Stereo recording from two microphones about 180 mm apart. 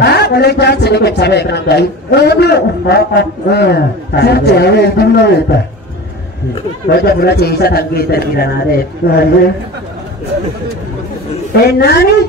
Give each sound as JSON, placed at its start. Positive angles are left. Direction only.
{"t": 0.0, "sound": "a man's voice", "side_deg": 65}
{"t": 6.9, "sound": "a man's voice", "side_deg": 60}
{"t": 11.6, "sound": "a man's voice", "side_deg": 60}